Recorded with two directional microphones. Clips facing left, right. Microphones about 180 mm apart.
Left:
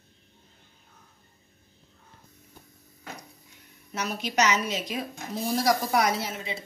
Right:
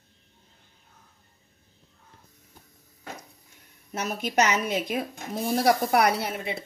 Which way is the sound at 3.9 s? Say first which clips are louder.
Right 2 dB; 50° right (ahead or behind).